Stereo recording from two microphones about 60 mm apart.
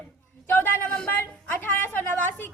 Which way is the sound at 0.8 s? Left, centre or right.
Centre.